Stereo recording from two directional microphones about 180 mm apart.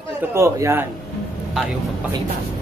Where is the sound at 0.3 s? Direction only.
15° right (ahead or behind).